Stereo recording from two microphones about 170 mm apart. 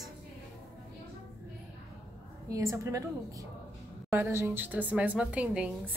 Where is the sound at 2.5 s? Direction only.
15° right (ahead or behind).